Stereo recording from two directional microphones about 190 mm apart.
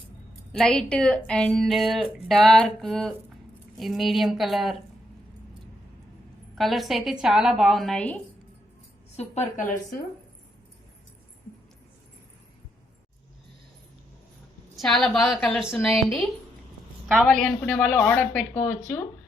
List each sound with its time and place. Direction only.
0.5 s a woman's voice: 5° left (ahead or behind)
6.6 s a woman's voice: centre (ahead or behind)
9.1 s a woman's voice: 35° left (ahead or behind)
14.8 s a woman's voice: centre (ahead or behind)
17.2 s speech: 5° left (ahead or behind)